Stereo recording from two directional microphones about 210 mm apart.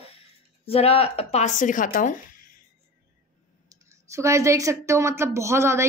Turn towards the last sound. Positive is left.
turn(degrees=-15)  # may be behind; listen again after turning